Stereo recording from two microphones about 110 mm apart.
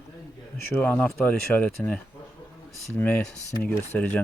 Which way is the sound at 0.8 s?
15° left (ahead or behind).